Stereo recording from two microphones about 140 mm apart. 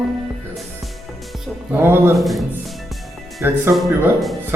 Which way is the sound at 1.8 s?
15° right (ahead or behind).